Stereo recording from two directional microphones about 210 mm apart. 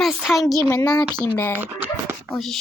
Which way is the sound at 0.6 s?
20° left (ahead or behind).